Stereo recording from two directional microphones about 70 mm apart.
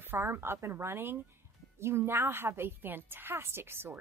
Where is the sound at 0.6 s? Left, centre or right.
Right.